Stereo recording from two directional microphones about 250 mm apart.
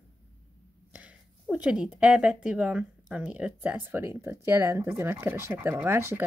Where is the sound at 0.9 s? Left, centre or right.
Centre.